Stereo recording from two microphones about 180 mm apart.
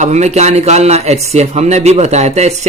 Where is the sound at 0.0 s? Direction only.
40° right (ahead or behind).